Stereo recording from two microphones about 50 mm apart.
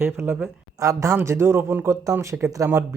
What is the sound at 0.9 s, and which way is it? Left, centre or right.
Speech, right.